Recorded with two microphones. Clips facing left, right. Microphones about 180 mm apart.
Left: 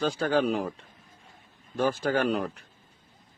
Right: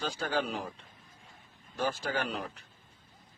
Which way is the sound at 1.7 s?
55° left (ahead or behind).